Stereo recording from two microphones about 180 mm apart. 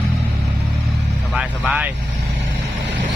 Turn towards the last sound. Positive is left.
turn(degrees=-5)  # may be behind; listen again after turning